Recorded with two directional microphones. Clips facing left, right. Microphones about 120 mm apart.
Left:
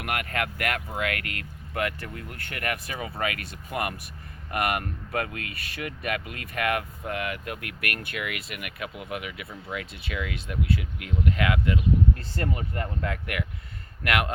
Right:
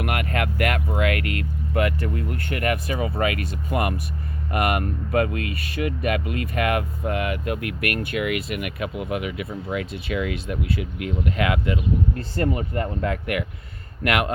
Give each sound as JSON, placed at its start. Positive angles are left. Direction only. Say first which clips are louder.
{"t": 0.0, "sound": "vehicle", "louder": "right 4 dB", "side_deg": -15}
{"t": 1.1, "sound": "speech", "louder": "right 8 dB", "side_deg": 45}
{"t": 1.7, "sound": "speech", "louder": "right 6 dB", "side_deg": -15}
{"t": 14.0, "sound": "speech", "louder": "right 4 dB", "side_deg": -20}